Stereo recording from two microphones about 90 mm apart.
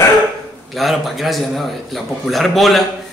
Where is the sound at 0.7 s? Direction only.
Centre (ahead or behind).